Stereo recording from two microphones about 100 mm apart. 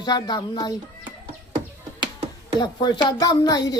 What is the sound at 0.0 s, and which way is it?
Speech, 45° left (ahead or behind).